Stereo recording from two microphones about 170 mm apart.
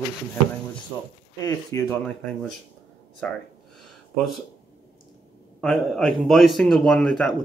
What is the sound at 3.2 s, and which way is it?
Speech, 5° left (ahead or behind).